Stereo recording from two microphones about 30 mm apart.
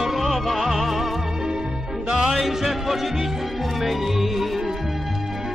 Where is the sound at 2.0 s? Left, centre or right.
Right.